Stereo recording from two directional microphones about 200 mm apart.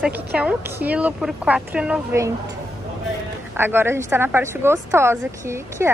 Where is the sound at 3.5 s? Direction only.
10° right (ahead or behind).